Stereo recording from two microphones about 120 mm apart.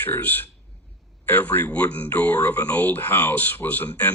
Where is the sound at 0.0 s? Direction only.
15° left (ahead or behind).